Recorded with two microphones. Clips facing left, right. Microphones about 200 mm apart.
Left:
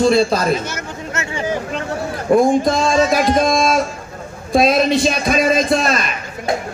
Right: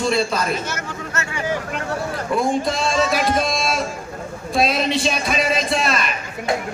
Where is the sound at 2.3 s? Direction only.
45° left (ahead or behind).